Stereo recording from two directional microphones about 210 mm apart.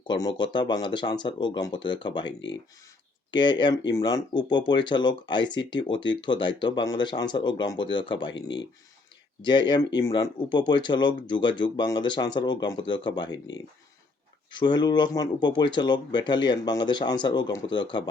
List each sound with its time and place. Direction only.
0.1 s speech: 20° left (ahead or behind)
2.2 s speech: 60° left (ahead or behind)
3.3 s speech: 20° left (ahead or behind)
8.3 s speech: 60° left (ahead or behind)
9.4 s speech: 20° left (ahead or behind)
14.5 s speech: 20° left (ahead or behind)